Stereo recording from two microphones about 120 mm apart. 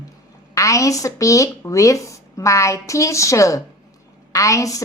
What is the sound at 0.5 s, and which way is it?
A woman's voice, 25° left (ahead or behind).